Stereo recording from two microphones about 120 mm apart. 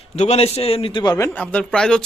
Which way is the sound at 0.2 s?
60° left (ahead or behind).